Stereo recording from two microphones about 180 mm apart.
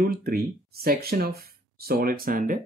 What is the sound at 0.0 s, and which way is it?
Speech, 55° right (ahead or behind).